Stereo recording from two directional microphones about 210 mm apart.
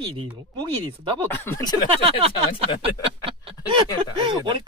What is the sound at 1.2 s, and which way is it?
Speech, 10° left (ahead or behind).